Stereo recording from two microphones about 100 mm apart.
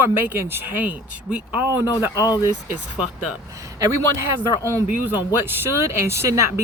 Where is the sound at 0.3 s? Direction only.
20° right (ahead or behind).